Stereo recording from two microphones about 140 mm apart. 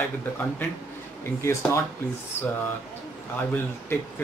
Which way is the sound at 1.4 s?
20° left (ahead or behind).